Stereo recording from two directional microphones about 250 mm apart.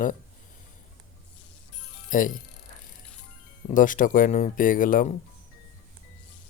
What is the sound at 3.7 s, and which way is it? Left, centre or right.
Speech, left.